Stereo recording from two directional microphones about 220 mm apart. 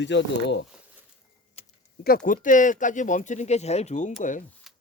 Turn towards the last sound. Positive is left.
turn(degrees=0)  # may be behind; listen again after turning